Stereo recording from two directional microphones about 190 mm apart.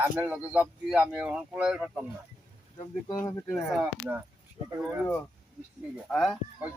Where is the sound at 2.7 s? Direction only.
20° left (ahead or behind).